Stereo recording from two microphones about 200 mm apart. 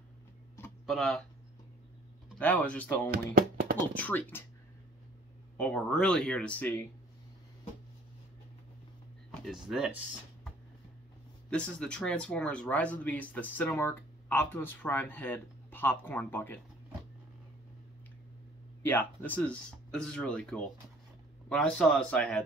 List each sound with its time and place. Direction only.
0.8 s speech: centre (ahead or behind)
2.3 s speech: 5° left (ahead or behind)
3.1 s speech: 50° right (ahead or behind)
3.9 s speech: 10° left (ahead or behind)
5.6 s speech: 5° left (ahead or behind)
9.3 s speech: centre (ahead or behind)
11.5 s speech: 5° left (ahead or behind)
18.9 s speech: 10° left (ahead or behind)